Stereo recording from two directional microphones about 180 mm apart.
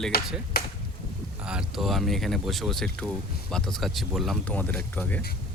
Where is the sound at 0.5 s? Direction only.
60° left (ahead or behind).